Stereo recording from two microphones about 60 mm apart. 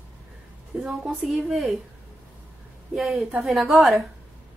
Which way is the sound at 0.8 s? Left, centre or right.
Centre.